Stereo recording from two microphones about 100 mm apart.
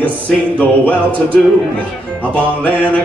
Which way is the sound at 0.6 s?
15° left (ahead or behind).